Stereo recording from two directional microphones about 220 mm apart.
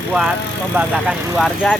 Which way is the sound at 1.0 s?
Centre (ahead or behind).